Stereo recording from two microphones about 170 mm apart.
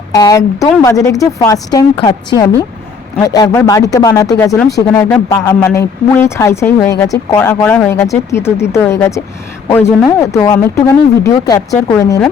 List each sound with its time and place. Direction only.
0.1 s speech: 20° left (ahead or behind)